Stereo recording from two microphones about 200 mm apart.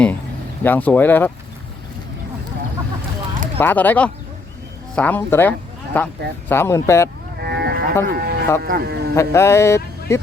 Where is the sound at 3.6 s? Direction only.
10° left (ahead or behind).